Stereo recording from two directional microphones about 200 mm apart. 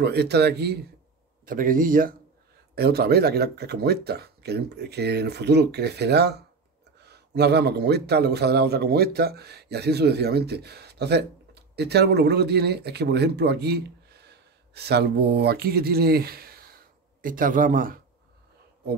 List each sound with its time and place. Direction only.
0.0 s speech: 55° right (ahead or behind)
1.4 s speech: 45° right (ahead or behind)